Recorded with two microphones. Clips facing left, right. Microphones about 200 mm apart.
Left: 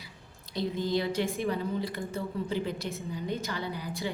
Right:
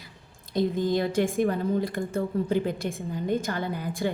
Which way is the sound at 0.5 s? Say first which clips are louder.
Right 5 dB; 50° right (ahead or behind).